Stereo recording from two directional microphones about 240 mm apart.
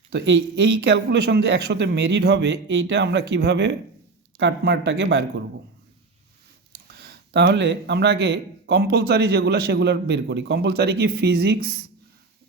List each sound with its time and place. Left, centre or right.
0.1 s speech: right
6.8 s speech: right